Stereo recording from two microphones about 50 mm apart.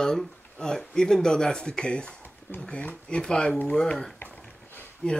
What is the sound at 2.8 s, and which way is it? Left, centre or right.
Speech, left.